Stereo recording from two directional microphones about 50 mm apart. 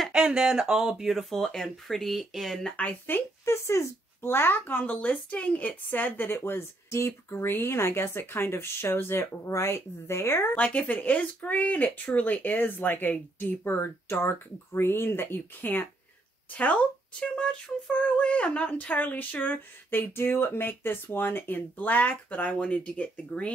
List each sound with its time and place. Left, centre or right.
0.1 s speech: centre
3.1 s a child's voice: left
3.4 s speech: left
4.2 s a child's voice: left
4.8 s speech: left
6.3 s speech: left
10.5 s speech: left
17.2 s speech: centre